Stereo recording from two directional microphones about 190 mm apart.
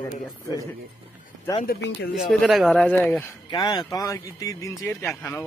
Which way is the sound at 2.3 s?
Centre (ahead or behind).